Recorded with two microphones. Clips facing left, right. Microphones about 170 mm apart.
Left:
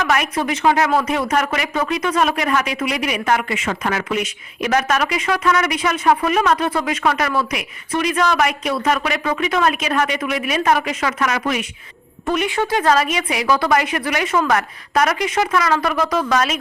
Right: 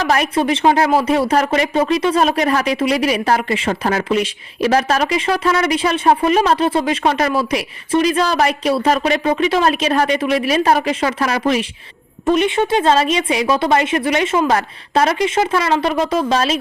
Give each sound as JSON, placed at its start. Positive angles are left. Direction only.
{"t": 0.0, "sound": "a woman's voice", "side_deg": -30}